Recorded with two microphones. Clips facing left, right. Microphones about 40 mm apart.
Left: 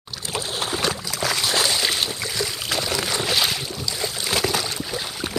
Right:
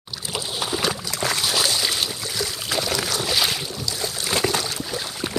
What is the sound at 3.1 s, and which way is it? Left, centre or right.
Boat, centre.